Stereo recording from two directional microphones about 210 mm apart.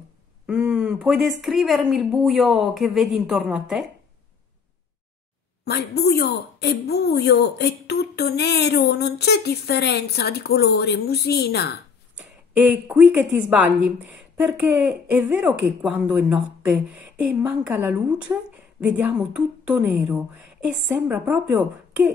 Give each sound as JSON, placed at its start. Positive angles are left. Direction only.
{"t": 0.5, "sound": "speech", "side_deg": -5}
{"t": 5.7, "sound": "a woman's voice", "side_deg": 50}
{"t": 12.2, "sound": "speech", "side_deg": -5}